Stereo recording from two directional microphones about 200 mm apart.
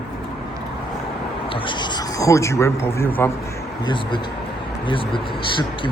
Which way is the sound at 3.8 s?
25° left (ahead or behind).